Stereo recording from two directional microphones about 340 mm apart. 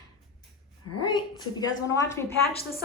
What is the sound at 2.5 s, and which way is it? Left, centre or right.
Speech, left.